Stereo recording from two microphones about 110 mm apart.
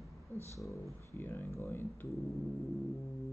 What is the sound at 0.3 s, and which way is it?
Speech, 25° left (ahead or behind).